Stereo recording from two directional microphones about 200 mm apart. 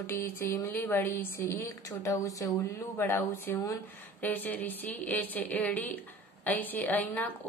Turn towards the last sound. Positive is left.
turn(degrees=10)  # may be behind; listen again after turning